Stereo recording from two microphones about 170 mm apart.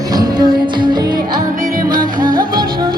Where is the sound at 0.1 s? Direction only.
25° right (ahead or behind).